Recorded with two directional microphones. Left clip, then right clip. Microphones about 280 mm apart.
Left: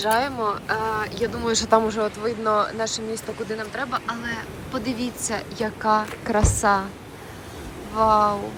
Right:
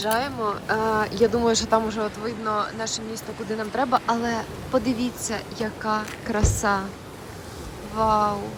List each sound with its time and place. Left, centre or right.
0.0 s a woman's voice: centre
7.9 s a woman's voice: centre